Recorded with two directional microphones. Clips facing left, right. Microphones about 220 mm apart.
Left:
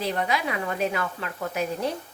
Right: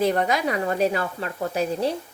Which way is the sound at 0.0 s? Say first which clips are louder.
Right 5 dB; 50° right (ahead or behind).